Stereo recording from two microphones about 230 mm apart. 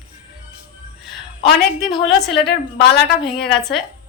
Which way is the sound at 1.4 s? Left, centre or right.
Centre.